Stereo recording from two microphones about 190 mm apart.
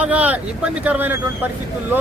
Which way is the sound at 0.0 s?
10° right (ahead or behind).